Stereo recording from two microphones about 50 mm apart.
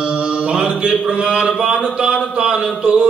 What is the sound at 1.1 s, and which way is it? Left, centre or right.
A man's voice, centre.